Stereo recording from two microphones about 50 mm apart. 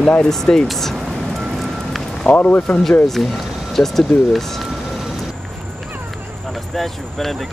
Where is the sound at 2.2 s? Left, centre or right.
Left.